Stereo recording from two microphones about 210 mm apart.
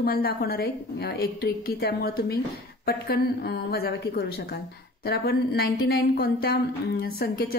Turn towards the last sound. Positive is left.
turn(degrees=45)  # may be behind; listen again after turning